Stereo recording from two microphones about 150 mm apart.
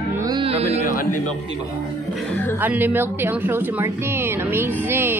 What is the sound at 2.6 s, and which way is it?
A woman's voice, 10° right (ahead or behind).